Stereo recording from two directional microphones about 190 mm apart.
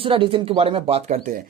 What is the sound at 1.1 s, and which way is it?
Speech, 50° right (ahead or behind).